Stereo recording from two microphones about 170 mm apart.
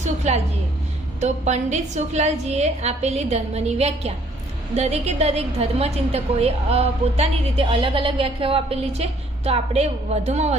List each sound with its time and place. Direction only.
0.0 s a woman's voice: 40° right (ahead or behind)